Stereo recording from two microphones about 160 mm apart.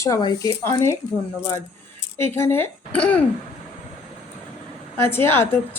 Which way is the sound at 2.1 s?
15° left (ahead or behind).